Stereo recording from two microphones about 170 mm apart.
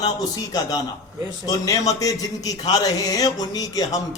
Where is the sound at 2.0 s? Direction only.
20° left (ahead or behind).